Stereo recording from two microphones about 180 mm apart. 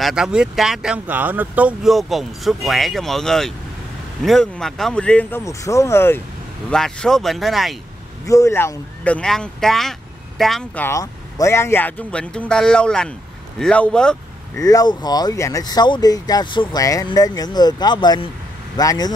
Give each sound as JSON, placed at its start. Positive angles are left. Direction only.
{"t": 0.0, "sound": "speech", "side_deg": -5}
{"t": 8.3, "sound": "speech", "side_deg": 15}
{"t": 14.6, "sound": "speech", "side_deg": 20}